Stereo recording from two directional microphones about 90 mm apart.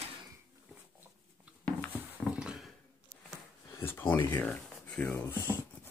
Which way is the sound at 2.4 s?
5° right (ahead or behind).